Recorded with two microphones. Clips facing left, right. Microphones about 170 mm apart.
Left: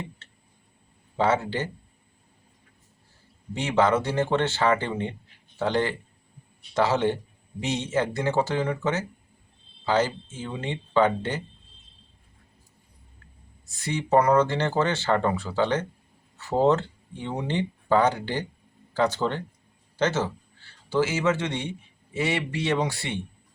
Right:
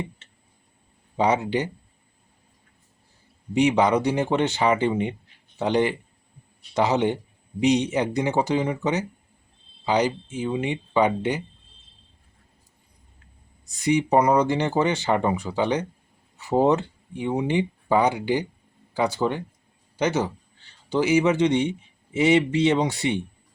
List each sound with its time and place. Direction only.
1.1 s speech: 15° right (ahead or behind)
3.5 s speech: 15° right (ahead or behind)
13.7 s speech: 15° right (ahead or behind)